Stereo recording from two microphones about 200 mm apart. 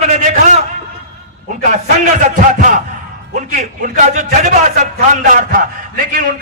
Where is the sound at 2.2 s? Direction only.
40° right (ahead or behind).